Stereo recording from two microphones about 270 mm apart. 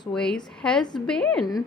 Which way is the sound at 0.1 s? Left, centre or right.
Centre.